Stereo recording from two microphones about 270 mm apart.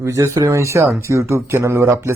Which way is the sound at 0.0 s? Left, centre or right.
Centre.